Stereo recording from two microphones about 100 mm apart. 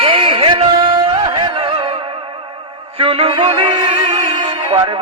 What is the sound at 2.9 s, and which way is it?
Music, 75° right (ahead or behind).